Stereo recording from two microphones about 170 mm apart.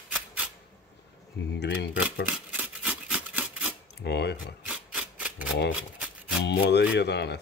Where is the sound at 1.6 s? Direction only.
75° left (ahead or behind).